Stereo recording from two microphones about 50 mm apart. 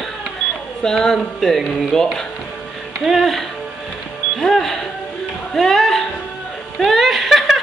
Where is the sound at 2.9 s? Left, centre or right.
Centre.